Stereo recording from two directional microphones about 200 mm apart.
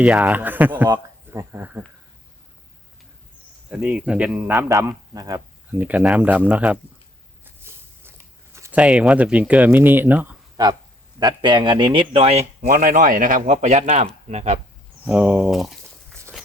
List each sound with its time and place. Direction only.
0.0 s speech: 5° right (ahead or behind)
3.7 s speech: 5° right (ahead or behind)
5.8 s speech: 5° right (ahead or behind)
7.4 s a sound: 10° right (ahead or behind)
10.6 s speech: 20° right (ahead or behind)
12.6 s speech: 40° right (ahead or behind)
15.0 s speech: 5° right (ahead or behind)